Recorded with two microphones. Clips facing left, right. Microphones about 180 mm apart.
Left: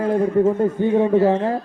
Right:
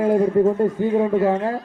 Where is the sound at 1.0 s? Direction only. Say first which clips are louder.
Left 2 dB; 30° left (ahead or behind).